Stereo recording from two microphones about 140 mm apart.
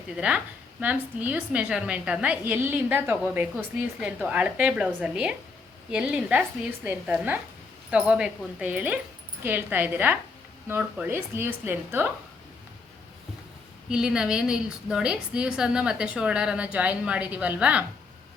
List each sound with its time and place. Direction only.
0.2 s speech: 10° right (ahead or behind)
13.9 s speech: 5° right (ahead or behind)